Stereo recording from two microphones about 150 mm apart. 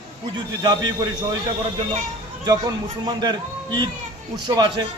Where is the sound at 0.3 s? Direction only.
25° right (ahead or behind).